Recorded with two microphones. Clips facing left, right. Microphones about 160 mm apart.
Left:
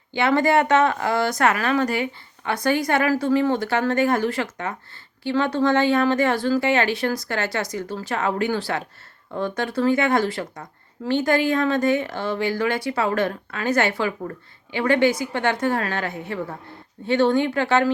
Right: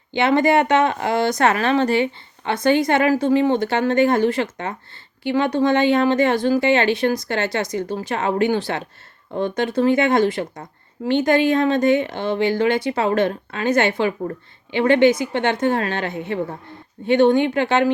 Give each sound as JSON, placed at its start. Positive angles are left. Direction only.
{"t": 0.1, "sound": "speech", "side_deg": -20}